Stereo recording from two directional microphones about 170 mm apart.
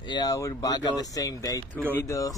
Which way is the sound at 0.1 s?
20° left (ahead or behind).